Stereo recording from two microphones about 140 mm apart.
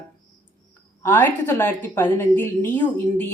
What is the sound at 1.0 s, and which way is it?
A woman's voice, 15° left (ahead or behind).